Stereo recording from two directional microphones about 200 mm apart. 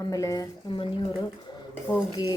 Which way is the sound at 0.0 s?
15° left (ahead or behind).